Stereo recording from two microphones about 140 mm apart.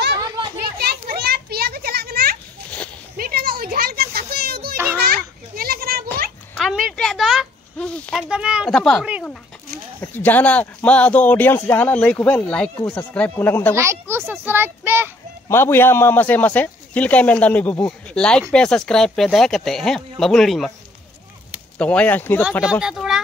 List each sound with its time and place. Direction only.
1.0 s children playing: 90° right
3.2 s a sound: 90° right
5.0 s children playing: 90° right
6.5 s a sound: centre (ahead or behind)
8.7 s speech: 5° left (ahead or behind)
13.7 s a child's voice: 20° right (ahead or behind)
15.4 s speech: 15° left (ahead or behind); by 20.7 s centre (ahead or behind)
21.7 s speech: 10° left (ahead or behind)
22.7 s speech: 5° right (ahead or behind)